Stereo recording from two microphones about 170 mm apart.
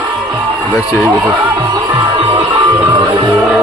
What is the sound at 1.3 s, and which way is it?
Music, 20° right (ahead or behind).